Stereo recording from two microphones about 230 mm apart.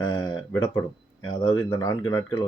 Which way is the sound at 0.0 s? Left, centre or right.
Centre.